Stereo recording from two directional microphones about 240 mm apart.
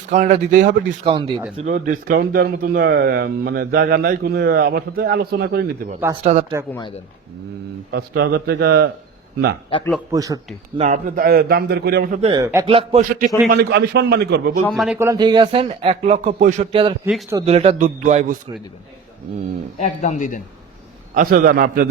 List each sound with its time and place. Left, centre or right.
0.1 s speech: right
1.0 s speech: right
1.6 s speech: right
7.9 s speech: right
10.1 s a man's voice: centre
10.8 s speech: right
12.2 s a man's voice: centre; by 14.6 s right
14.7 s speech: centre
14.9 s speech: centre; by 18.5 s right
19.8 s speech: left
21.2 s speech: right